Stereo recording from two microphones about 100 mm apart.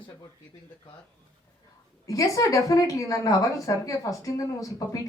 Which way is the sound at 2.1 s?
35° left (ahead or behind).